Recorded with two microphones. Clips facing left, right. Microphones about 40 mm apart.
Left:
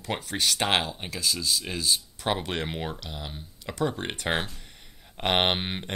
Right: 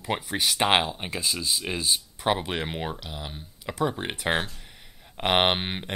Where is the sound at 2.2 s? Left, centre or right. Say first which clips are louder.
Right 3 dB; centre.